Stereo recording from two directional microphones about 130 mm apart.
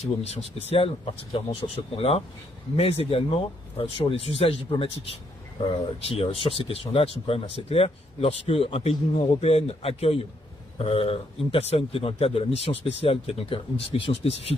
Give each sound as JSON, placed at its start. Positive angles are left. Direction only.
{"t": 0.0, "sound": "speech", "side_deg": 55}